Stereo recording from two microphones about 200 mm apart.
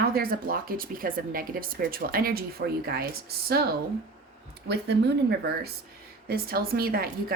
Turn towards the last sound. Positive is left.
turn(degrees=-50)  # may be behind; listen again after turning